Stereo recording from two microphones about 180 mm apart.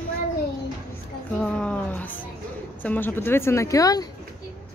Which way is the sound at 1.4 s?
5° left (ahead or behind).